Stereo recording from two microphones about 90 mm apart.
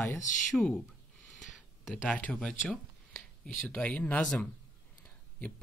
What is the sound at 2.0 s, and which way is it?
Speech, 15° left (ahead or behind).